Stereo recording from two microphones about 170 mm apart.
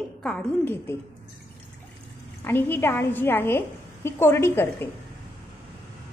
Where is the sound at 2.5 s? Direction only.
10° left (ahead or behind).